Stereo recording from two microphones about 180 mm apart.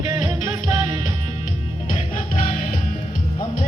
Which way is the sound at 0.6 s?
40° left (ahead or behind).